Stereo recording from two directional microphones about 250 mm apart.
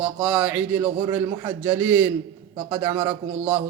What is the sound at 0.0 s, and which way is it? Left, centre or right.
A man's voice, centre.